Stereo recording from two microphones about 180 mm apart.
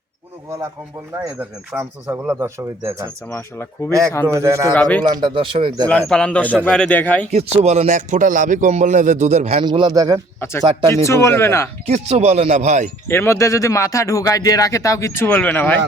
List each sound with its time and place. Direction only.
1.1 s speech: 15° right (ahead or behind)
3.2 s speech: 15° left (ahead or behind)
4.3 s speech: 15° right (ahead or behind)
4.7 s speech: 10° left (ahead or behind)
5.0 s speech: 25° right (ahead or behind)
5.9 s speech: 5° left (ahead or behind)
7.3 s a man's voice: 35° right (ahead or behind)
9.6 s speech: 25° right (ahead or behind)
10.8 s speech: 15° left (ahead or behind)
11.9 s a man's voice: 35° right (ahead or behind)
13.1 s speech: 15° left (ahead or behind)